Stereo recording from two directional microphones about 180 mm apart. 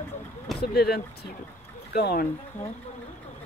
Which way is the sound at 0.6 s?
60° left (ahead or behind).